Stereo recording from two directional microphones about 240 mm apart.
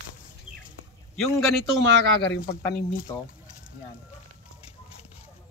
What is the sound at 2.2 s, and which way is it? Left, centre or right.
Speech, left.